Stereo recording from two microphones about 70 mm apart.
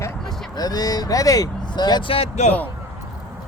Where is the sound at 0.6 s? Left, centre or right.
Left.